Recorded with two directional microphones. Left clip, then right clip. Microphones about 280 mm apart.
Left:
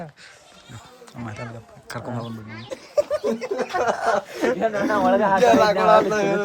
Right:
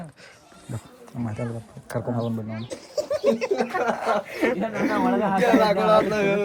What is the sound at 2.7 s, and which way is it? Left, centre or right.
Laughter, centre.